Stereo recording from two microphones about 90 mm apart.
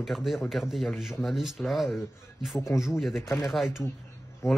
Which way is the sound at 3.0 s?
Centre (ahead or behind).